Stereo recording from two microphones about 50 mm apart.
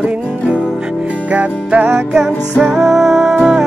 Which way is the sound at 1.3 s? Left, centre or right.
Right.